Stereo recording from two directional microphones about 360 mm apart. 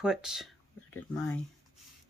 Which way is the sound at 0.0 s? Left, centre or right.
Centre.